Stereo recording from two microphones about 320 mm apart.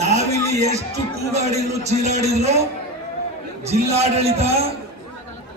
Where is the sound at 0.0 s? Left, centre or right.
Right.